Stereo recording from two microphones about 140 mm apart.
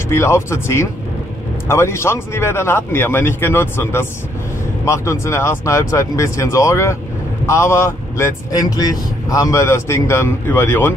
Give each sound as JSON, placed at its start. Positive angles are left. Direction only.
{"t": 0.1, "sound": "speech", "side_deg": 20}